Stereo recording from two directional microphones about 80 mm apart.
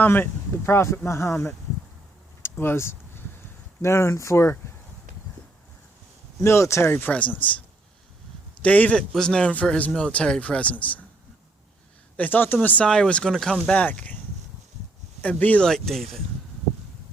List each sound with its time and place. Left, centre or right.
0.0 s speech: left
2.4 s a sound: left
3.8 s speech: left
6.4 s speech: left
7.0 s a man's voice: centre
8.6 s a man's voice: centre
12.1 s a man's voice: left; by 13.7 s centre
13.7 s a man's voice: centre
15.2 s a man's voice: centre
15.6 s speech: centre